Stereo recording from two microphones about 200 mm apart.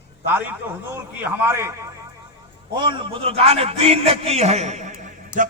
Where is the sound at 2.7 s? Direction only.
25° right (ahead or behind).